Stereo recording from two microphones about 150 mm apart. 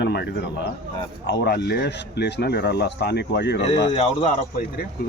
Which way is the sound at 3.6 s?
45° left (ahead or behind).